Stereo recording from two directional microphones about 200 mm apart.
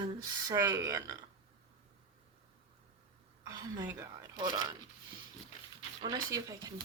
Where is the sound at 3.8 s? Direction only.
20° right (ahead or behind).